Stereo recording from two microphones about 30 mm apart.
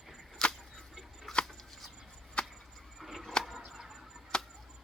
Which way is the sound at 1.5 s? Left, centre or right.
Centre.